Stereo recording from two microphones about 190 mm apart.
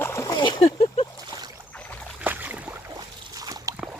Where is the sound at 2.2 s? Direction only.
10° right (ahead or behind).